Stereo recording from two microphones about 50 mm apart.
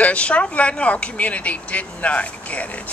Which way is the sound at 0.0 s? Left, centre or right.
Left.